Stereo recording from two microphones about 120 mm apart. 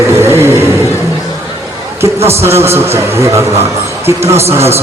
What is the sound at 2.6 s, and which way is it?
A man's voice, 20° right (ahead or behind).